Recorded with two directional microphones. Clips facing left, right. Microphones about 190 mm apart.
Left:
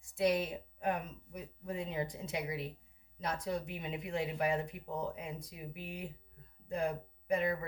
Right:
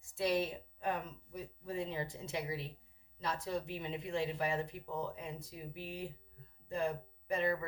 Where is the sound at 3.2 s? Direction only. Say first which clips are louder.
Left 1 dB; 20° left (ahead or behind).